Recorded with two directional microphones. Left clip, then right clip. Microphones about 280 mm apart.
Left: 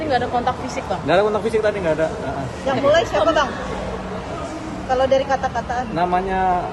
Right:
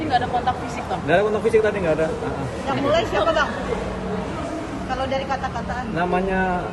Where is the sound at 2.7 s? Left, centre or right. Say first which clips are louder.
Left 4 dB; left.